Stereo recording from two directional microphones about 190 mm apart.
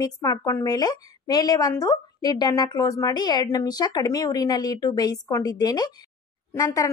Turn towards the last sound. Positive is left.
turn(degrees=15)  # may be behind; listen again after turning